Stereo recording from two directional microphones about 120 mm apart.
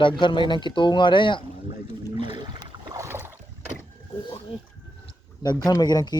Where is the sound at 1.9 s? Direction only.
45° right (ahead or behind).